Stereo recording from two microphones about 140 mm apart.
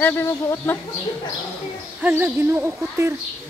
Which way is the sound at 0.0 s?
15° left (ahead or behind).